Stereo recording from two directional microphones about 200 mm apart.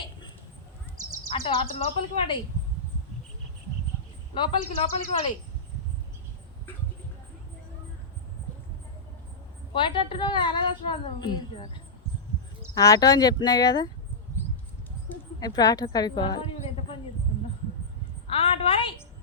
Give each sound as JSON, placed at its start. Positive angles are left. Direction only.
{"t": 1.3, "sound": "a woman's voice", "side_deg": 30}
{"t": 4.4, "sound": "a woman's voice", "side_deg": 25}
{"t": 9.7, "sound": "a woman's voice", "side_deg": 25}
{"t": 15.4, "sound": "a woman's voice", "side_deg": 20}
{"t": 18.3, "sound": "a sound", "side_deg": 25}